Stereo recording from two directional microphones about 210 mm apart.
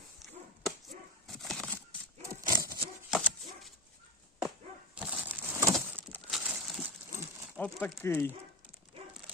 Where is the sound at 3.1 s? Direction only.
Centre (ahead or behind).